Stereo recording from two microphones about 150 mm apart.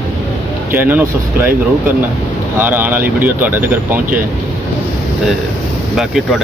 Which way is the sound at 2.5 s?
15° right (ahead or behind).